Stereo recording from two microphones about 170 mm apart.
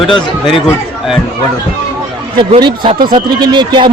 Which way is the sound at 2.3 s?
25° right (ahead or behind).